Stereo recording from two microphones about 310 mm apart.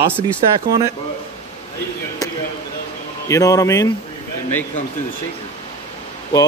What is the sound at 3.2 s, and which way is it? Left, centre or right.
Speech, centre.